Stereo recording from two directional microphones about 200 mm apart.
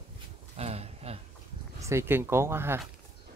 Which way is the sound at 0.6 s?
30° right (ahead or behind).